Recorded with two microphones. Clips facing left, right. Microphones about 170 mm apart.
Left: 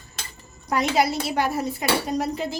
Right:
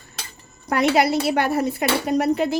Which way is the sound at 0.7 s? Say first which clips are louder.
Right 3 dB; 65° right (ahead or behind).